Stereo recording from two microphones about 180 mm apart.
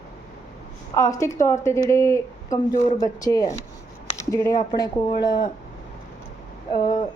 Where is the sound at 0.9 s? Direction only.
15° left (ahead or behind).